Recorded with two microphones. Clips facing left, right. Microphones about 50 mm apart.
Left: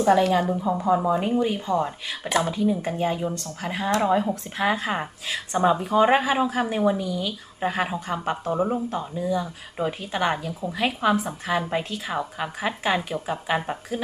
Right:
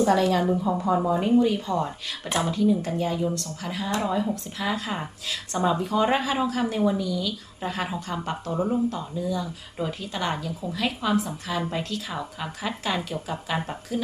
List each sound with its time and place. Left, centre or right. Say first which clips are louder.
0.0 s a woman's voice: left 2 dB; centre
0.4 s a woman's voice: right 1 dB; centre
1.0 s speech: right 1 dB; centre